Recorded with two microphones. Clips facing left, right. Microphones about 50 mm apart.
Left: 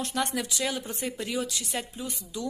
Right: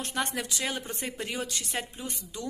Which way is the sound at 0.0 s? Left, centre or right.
Right.